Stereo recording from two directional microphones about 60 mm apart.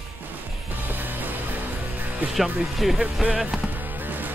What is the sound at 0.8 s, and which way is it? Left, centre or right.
Music, right.